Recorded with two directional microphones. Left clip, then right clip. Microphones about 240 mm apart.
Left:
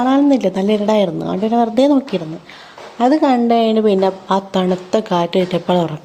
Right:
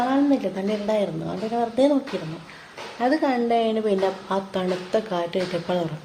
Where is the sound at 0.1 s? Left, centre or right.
Left.